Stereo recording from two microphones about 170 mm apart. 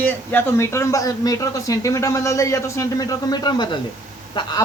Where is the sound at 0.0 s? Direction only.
10° left (ahead or behind).